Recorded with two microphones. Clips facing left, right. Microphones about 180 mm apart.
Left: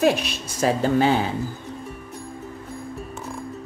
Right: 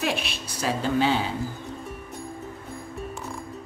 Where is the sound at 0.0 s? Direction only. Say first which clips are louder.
Left 8 dB; 40° left (ahead or behind).